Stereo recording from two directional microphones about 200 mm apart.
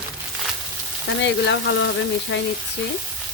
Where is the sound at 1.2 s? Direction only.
65° left (ahead or behind).